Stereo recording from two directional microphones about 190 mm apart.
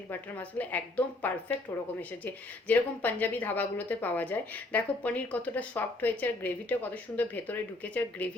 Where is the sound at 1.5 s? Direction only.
30° left (ahead or behind).